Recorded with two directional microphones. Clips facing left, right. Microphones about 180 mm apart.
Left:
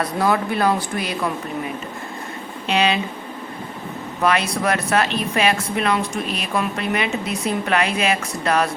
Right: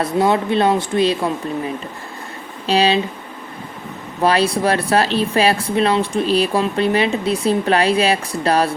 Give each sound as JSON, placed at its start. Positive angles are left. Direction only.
{"t": 0.0, "sound": "speech", "side_deg": -25}
{"t": 2.6, "sound": "speech", "side_deg": -35}
{"t": 4.2, "sound": "speech", "side_deg": -30}